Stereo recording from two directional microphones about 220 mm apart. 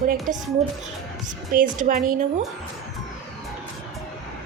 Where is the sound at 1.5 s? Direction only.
40° right (ahead or behind).